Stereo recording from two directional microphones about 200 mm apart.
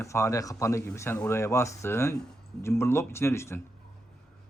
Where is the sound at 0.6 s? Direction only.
15° left (ahead or behind).